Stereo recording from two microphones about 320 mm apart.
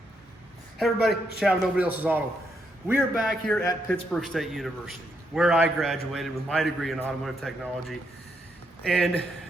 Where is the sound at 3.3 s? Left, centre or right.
Centre.